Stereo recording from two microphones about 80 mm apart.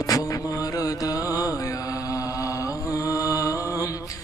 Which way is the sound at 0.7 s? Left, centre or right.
Left.